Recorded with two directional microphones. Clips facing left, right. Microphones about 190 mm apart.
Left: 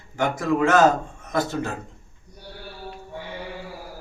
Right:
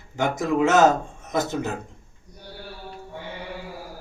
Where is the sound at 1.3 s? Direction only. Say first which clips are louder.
Even; 20° right (ahead or behind).